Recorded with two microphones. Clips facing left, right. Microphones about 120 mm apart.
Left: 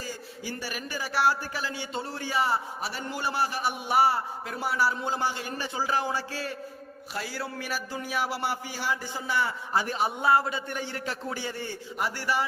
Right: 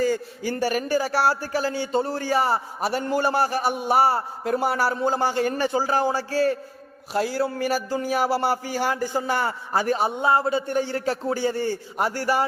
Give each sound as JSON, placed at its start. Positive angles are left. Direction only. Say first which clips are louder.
{"t": 0.0, "sound": "speech", "louder": "right 14 dB", "side_deg": -55}
{"t": 5.7, "sound": "a man's voice", "louder": "right 6 dB", "side_deg": -40}
{"t": 10.2, "sound": "a man's voice", "louder": "right 3 dB", "side_deg": -25}